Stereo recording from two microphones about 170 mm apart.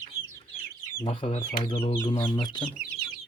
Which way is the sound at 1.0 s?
30° left (ahead or behind).